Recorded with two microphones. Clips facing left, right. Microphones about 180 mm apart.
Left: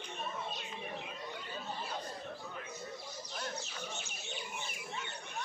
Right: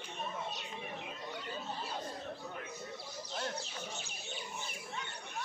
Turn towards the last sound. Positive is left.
turn(degrees=-30)  # may be behind; listen again after turning